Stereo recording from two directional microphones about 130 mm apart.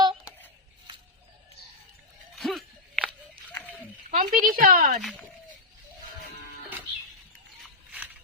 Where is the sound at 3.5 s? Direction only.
15° left (ahead or behind).